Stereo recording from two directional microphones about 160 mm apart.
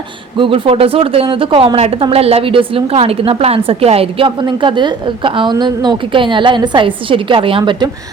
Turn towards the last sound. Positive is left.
turn(degrees=-30)  # may be behind; listen again after turning